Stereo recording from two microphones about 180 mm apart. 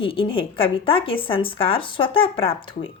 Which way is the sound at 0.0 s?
30° left (ahead or behind).